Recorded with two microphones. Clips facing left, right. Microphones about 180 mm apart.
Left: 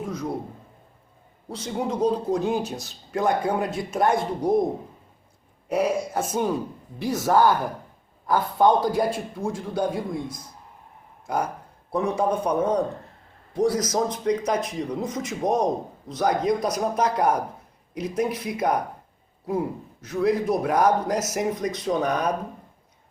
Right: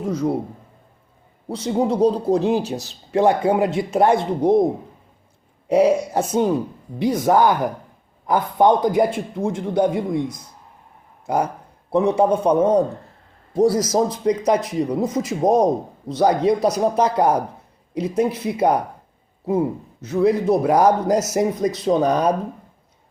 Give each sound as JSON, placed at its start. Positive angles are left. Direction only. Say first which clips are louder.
{"t": 0.0, "sound": "a man's voice", "louder": "right 8 dB", "side_deg": -30}
{"t": 1.5, "sound": "a man's voice", "louder": "right 8 dB", "side_deg": -30}
{"t": 5.6, "sound": "a man's voice", "louder": "right 8 dB", "side_deg": -30}
{"t": 7.0, "sound": "a man's voice", "louder": "right 4 dB", "side_deg": -20}
{"t": 11.9, "sound": "a man's voice", "louder": "right 7 dB", "side_deg": -30}
{"t": 20.1, "sound": "speech", "louder": "right 5 dB", "side_deg": -30}